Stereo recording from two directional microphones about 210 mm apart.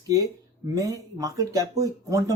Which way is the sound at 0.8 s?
15° right (ahead or behind).